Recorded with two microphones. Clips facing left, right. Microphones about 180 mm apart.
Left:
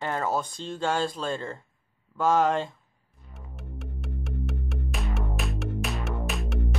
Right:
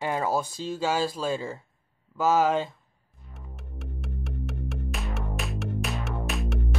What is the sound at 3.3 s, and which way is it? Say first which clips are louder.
Music: left 2 dB; centre (ahead or behind).